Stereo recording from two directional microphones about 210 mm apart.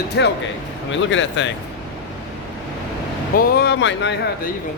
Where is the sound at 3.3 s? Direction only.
45° left (ahead or behind).